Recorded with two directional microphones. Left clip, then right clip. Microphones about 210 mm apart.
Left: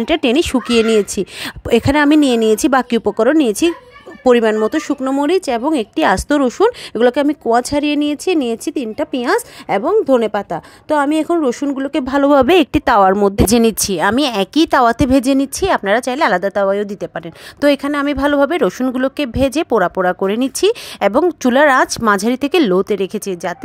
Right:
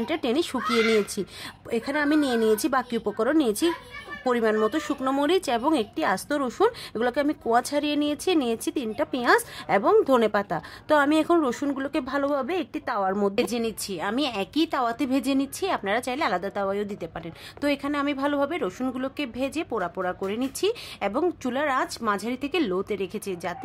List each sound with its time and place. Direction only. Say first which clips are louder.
0.0 s speech: left 11 dB; 40° left (ahead or behind)